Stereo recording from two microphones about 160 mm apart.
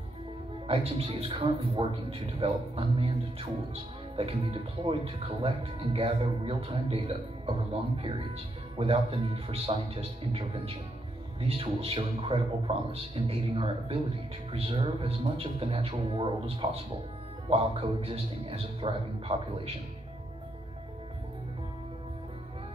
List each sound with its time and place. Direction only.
0.7 s speech: 35° right (ahead or behind)